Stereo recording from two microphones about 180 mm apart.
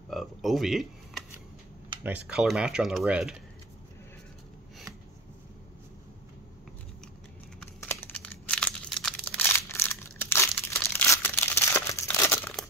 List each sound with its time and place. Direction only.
0.1 s speech: centre (ahead or behind)
7.6 s crumpling: 10° left (ahead or behind)